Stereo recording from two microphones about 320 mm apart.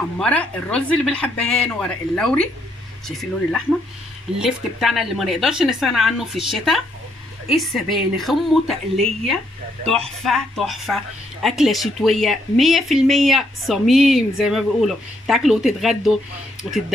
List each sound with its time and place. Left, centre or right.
0.2 s a woman's voice: centre